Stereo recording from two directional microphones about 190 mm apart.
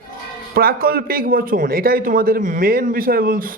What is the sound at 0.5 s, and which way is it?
Speech, 55° right (ahead or behind).